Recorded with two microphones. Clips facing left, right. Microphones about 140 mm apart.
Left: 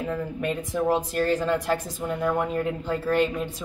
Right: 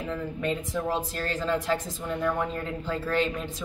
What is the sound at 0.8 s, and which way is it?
Speech, 15° left (ahead or behind).